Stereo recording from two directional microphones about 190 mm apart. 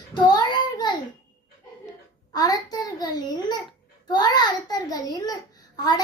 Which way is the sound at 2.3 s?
20° left (ahead or behind).